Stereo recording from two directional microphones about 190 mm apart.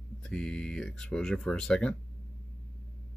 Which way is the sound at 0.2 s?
5° left (ahead or behind).